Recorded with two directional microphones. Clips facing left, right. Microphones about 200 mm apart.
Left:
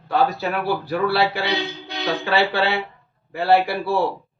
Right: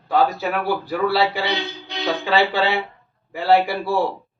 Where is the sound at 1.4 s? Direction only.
Centre (ahead or behind).